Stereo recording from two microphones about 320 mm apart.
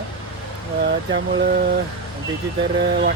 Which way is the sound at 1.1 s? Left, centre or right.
Right.